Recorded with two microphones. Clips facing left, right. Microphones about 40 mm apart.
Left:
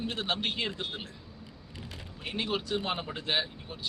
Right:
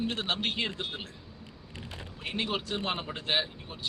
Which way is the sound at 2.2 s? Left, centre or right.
Centre.